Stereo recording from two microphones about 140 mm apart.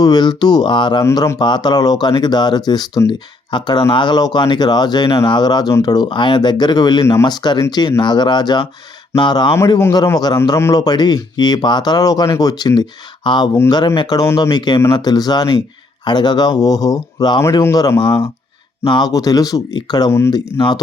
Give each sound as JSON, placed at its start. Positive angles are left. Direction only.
{"t": 0.0, "sound": "speech", "side_deg": 30}
{"t": 1.0, "sound": "speech", "side_deg": 25}
{"t": 9.7, "sound": "a man's voice", "side_deg": 20}
{"t": 10.0, "sound": "speech", "side_deg": 30}
{"t": 18.0, "sound": "speech", "side_deg": 35}
{"t": 20.3, "sound": "speech", "side_deg": 30}